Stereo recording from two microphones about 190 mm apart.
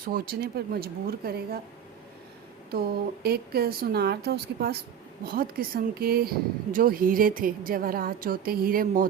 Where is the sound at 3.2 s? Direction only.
55° right (ahead or behind).